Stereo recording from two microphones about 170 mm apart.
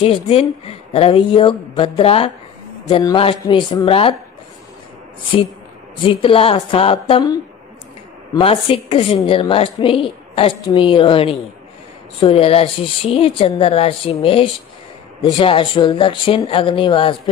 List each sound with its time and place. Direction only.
0.0 s a woman's voice: 35° left (ahead or behind)
2.9 s a woman's voice: 20° left (ahead or behind)
6.0 s a woman's voice: 30° left (ahead or behind)
8.4 s a woman's voice: 35° left (ahead or behind)